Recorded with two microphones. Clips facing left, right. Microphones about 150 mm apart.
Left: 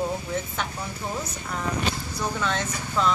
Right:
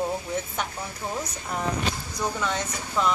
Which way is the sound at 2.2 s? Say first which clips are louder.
Even; 10° right (ahead or behind).